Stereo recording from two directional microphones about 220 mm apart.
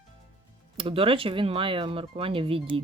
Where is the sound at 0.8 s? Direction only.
25° right (ahead or behind).